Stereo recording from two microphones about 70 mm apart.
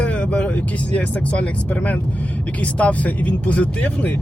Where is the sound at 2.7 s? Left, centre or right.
Left.